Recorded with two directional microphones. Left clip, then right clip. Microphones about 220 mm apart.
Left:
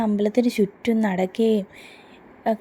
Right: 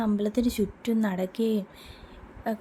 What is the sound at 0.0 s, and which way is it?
Speech, 15° left (ahead or behind).